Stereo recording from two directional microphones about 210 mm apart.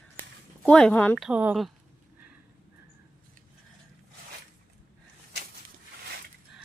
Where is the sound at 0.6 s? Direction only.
5° left (ahead or behind).